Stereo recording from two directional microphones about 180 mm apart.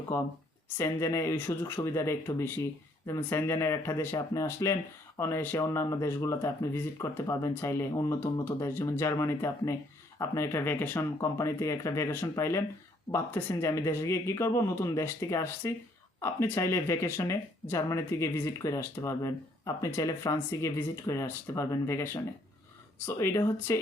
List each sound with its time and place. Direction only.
0.1 s speech: 15° left (ahead or behind)